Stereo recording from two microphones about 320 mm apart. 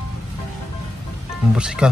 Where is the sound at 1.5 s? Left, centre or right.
Centre.